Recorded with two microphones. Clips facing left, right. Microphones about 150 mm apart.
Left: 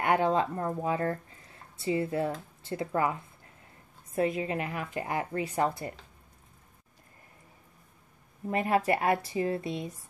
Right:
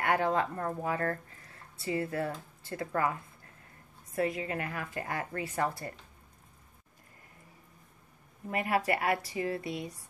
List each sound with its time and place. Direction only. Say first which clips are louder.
0.0 s a woman's voice: left 3 dB; 20° left (ahead or behind)
8.5 s a woman's voice: left 3 dB; 25° left (ahead or behind)